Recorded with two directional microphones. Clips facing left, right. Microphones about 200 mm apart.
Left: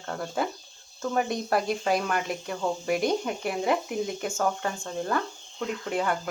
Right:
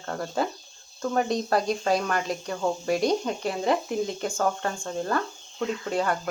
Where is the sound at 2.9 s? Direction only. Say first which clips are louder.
Right 2 dB; 20° right (ahead or behind).